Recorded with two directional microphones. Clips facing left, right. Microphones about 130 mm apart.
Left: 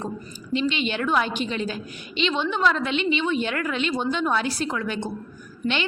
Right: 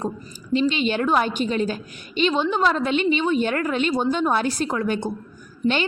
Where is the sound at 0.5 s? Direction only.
40° right (ahead or behind).